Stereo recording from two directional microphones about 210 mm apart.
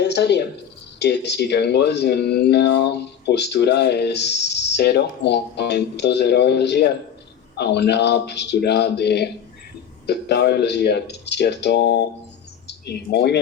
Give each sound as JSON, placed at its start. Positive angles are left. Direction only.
{"t": 0.0, "sound": "speech", "side_deg": 55}